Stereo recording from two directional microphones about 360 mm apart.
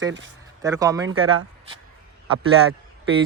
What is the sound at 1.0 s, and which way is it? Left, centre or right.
Speech, right.